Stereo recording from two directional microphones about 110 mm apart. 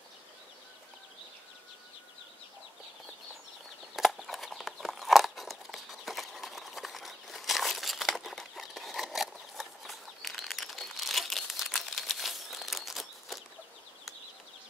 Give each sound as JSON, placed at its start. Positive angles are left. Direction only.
{"t": 3.9, "sound": "horse", "side_deg": 0}